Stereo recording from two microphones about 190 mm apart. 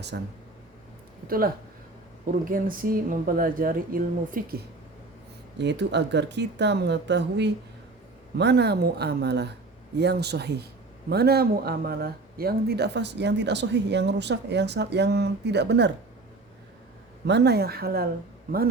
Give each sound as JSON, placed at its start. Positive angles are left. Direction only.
{"t": 0.1, "sound": "speech", "side_deg": -65}
{"t": 1.3, "sound": "speech", "side_deg": -50}
{"t": 5.5, "sound": "speech", "side_deg": -65}
{"t": 17.2, "sound": "speech", "side_deg": -60}